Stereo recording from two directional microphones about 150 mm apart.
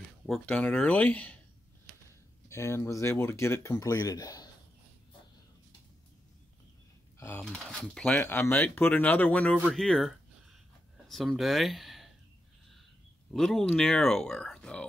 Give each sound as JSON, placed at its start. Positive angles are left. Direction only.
{"t": 0.3, "sound": "speech", "side_deg": 10}
{"t": 2.5, "sound": "speech", "side_deg": 20}
{"t": 7.2, "sound": "speech", "side_deg": 15}
{"t": 7.5, "sound": "speech", "side_deg": 5}
{"t": 8.2, "sound": "speech", "side_deg": 15}
{"t": 13.3, "sound": "speech", "side_deg": 0}